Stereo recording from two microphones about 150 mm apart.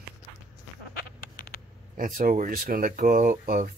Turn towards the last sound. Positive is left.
turn(degrees=-70)  # may be behind; listen again after turning